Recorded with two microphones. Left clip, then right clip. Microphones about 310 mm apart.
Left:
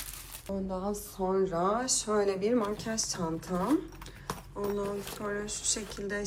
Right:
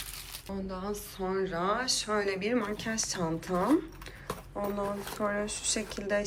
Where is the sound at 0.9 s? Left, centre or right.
Centre.